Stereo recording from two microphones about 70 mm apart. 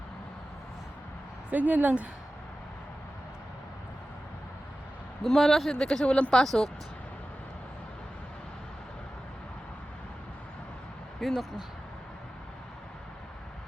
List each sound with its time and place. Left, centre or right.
1.5 s speech: right
5.2 s speech: centre
11.2 s speech: centre